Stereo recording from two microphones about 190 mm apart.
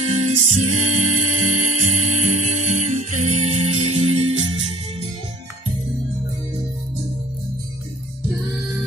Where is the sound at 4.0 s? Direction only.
90° right.